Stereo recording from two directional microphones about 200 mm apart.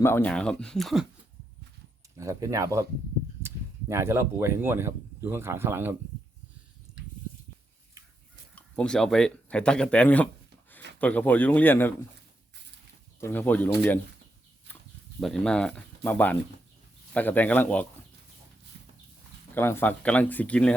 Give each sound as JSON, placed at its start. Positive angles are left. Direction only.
{"t": 0.0, "sound": "speech", "side_deg": 10}
{"t": 2.1, "sound": "speech", "side_deg": -15}
{"t": 8.5, "sound": "speech", "side_deg": 5}
{"t": 13.1, "sound": "speech", "side_deg": 10}
{"t": 14.7, "sound": "a sound", "side_deg": 10}
{"t": 15.2, "sound": "speech", "side_deg": 5}
{"t": 19.5, "sound": "speech", "side_deg": 10}